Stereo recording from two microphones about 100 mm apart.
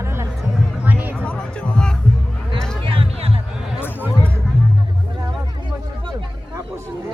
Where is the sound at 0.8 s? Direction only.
20° right (ahead or behind).